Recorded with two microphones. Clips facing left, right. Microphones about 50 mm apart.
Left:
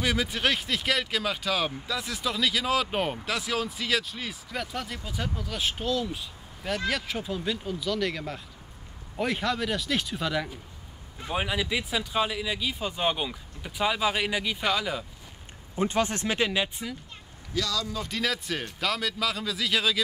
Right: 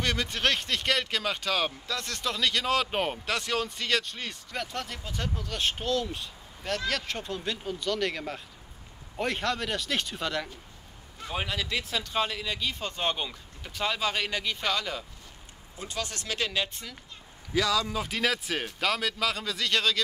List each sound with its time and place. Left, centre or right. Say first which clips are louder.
0.0 s speech: left 1 dB; centre
15.7 s speech: left 10 dB; left; by 16.9 s centre
17.6 s speech: right 3 dB; centre
18.0 s speech: right 1 dB; centre